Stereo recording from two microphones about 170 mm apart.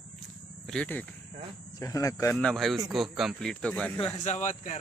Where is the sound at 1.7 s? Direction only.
20° left (ahead or behind).